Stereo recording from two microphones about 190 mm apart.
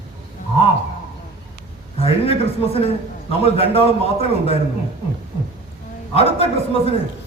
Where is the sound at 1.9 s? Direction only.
30° left (ahead or behind).